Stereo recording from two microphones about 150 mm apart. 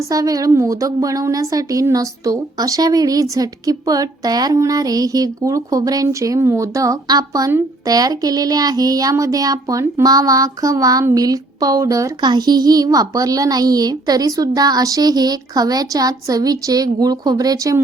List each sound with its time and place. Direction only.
0.0 s a woman's voice: 25° right (ahead or behind)